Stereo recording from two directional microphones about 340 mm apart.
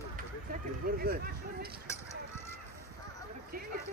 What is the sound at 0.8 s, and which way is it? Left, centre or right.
Speech, right.